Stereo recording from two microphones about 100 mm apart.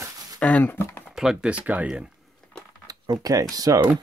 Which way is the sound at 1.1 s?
5° right (ahead or behind).